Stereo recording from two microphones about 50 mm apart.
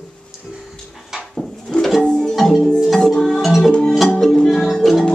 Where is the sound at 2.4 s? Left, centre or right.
Centre.